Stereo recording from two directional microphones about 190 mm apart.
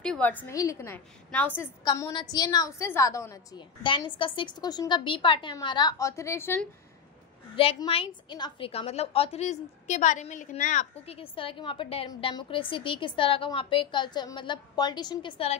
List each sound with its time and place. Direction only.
0.0 s a woman's voice: 5° left (ahead or behind)
3.8 s a woman's voice: 25° left (ahead or behind); by 6.7 s 10° left (ahead or behind)
7.5 s a woman's voice: 30° left (ahead or behind)